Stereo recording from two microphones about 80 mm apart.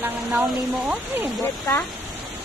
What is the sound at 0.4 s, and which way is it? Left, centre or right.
Speech, right.